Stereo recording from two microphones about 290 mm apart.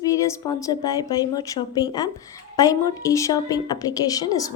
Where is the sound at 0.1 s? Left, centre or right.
Centre.